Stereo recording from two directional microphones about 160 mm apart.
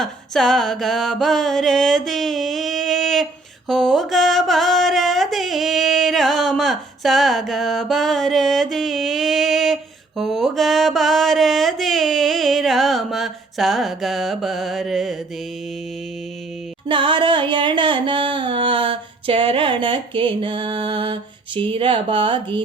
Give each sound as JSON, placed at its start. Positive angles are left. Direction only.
{"t": 0.0, "sound": "music", "side_deg": 0}
{"t": 10.2, "sound": "mantra", "side_deg": 0}
{"t": 16.9, "sound": "music", "side_deg": -30}